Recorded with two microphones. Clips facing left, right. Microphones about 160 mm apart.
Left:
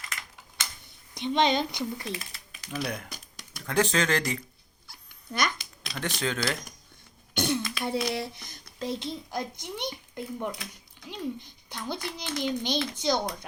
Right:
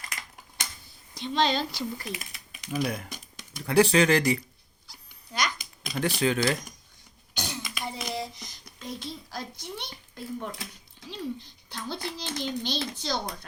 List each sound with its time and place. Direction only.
1.1 s a child's voice: 20° left (ahead or behind)
2.8 s speech: 5° right (ahead or behind)
4.9 s dog: 55° left (ahead or behind)
5.9 s speech: 10° right (ahead or behind)
7.3 s throat clearing: 55° left (ahead or behind)
7.9 s speech: 70° left (ahead or behind)
8.8 s a child's voice: 25° left (ahead or behind)